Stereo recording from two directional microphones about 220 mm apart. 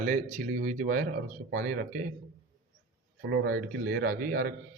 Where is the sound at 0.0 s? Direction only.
35° right (ahead or behind).